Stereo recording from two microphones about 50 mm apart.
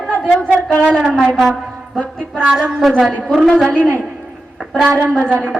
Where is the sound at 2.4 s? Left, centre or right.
Centre.